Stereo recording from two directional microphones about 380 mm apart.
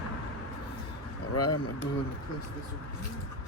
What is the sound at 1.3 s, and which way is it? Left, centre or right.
Speech, left.